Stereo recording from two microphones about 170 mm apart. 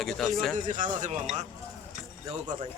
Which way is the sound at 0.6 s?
50° right (ahead or behind).